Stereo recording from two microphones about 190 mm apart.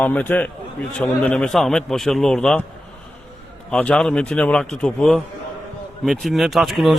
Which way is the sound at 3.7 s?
5° left (ahead or behind).